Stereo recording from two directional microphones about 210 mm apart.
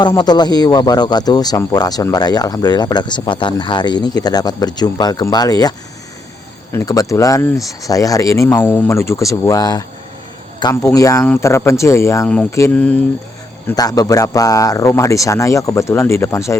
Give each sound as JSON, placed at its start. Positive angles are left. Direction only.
{"t": 0.0, "sound": "speech", "side_deg": 20}
{"t": 6.7, "sound": "speech", "side_deg": 15}